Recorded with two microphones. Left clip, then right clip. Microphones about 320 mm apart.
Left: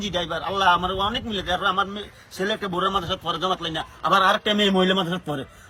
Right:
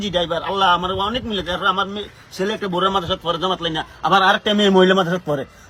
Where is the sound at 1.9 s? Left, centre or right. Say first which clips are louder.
Right 5 dB; centre.